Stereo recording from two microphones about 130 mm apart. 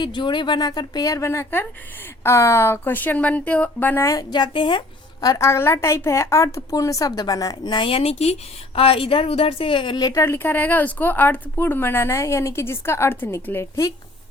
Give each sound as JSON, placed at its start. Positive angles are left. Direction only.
{"t": 0.0, "sound": "a woman's voice", "side_deg": 35}
{"t": 5.2, "sound": "a woman's voice", "side_deg": 25}
{"t": 10.2, "sound": "speech", "side_deg": 15}